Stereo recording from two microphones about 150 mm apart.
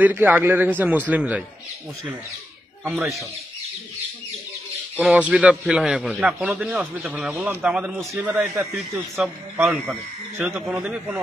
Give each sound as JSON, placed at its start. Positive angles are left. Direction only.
{"t": 0.0, "sound": "a man's voice", "side_deg": -10}
{"t": 2.9, "sound": "a man's voice", "side_deg": 0}
{"t": 5.0, "sound": "a man's voice", "side_deg": -10}
{"t": 8.5, "sound": "a man's voice", "side_deg": -20}
{"t": 10.7, "sound": "a man's voice", "side_deg": -5}